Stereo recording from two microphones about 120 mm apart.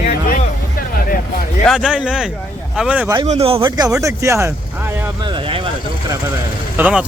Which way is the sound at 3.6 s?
30° right (ahead or behind).